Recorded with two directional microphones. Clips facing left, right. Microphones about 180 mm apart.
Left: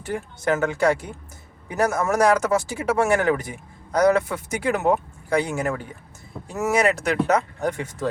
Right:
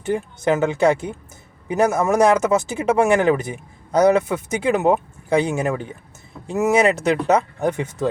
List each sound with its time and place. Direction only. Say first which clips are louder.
0.0 s speech: right 5 dB; 20° right (ahead or behind)